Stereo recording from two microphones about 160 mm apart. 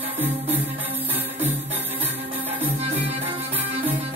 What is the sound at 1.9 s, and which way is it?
Music, 40° right (ahead or behind).